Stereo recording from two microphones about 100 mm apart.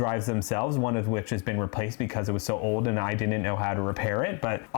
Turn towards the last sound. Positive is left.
turn(degrees=25)  # may be behind; listen again after turning